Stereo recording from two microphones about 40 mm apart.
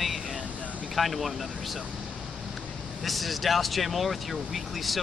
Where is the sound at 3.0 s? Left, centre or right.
Centre.